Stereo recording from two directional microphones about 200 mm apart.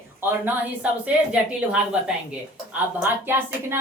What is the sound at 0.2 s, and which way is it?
A woman's voice, 10° right (ahead or behind).